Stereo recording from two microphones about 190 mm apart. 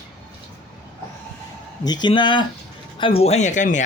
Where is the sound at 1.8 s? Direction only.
20° left (ahead or behind).